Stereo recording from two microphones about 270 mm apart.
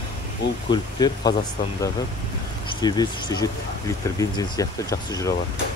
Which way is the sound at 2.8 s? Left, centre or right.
Centre.